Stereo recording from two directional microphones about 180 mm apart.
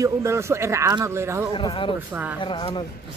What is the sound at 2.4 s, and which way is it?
Speech, 25° left (ahead or behind).